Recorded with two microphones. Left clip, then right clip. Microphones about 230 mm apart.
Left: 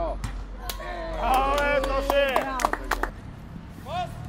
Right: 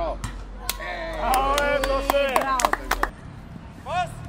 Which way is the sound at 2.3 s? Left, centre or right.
Right.